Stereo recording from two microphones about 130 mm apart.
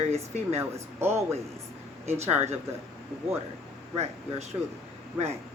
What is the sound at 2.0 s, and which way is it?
Speech, 55° right (ahead or behind).